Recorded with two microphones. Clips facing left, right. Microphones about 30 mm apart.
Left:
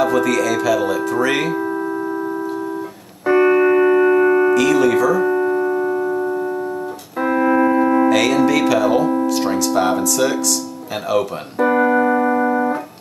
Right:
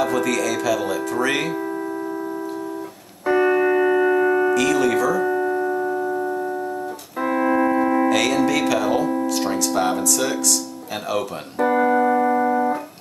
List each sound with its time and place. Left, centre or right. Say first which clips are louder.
0.0 s speech: left 4 dB; centre
3.3 s music: left 4 dB; centre
4.6 s speech: left 4 dB; centre
5.2 s music: left 4 dB; centre
7.2 s speech: left 4 dB; centre
11.1 s music: left 6 dB; centre